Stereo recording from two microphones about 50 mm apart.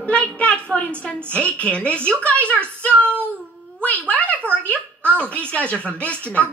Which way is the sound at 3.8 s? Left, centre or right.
Left.